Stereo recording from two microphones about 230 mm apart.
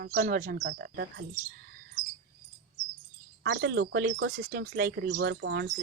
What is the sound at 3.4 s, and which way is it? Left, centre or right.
Speech, right.